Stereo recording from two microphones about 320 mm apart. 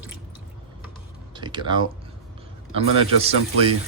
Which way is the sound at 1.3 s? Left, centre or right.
Centre.